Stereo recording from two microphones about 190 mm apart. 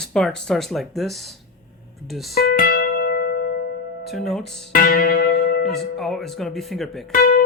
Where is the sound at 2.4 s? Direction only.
50° left (ahead or behind).